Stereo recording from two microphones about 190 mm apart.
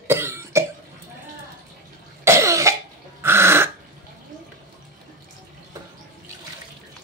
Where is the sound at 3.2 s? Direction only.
15° right (ahead or behind).